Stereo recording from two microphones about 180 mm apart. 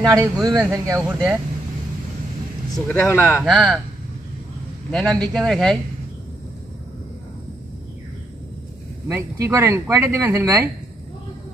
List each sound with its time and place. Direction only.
0.0 s speech: 20° right (ahead or behind)
1.0 s speech: 10° right (ahead or behind)
2.9 s speech: 15° left (ahead or behind)
3.4 s speech: centre (ahead or behind)
4.9 s speech: 5° left (ahead or behind)
9.0 s speech: 15° right (ahead or behind)